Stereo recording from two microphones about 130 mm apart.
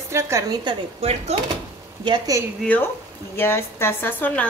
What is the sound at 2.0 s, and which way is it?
Speech, 30° right (ahead or behind).